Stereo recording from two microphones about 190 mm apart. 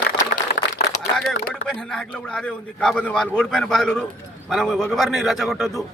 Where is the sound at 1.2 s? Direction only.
Centre (ahead or behind).